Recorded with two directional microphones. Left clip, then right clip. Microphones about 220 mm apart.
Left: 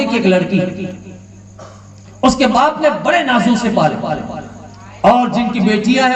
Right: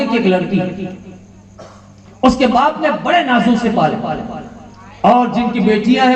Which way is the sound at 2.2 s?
45° left (ahead or behind).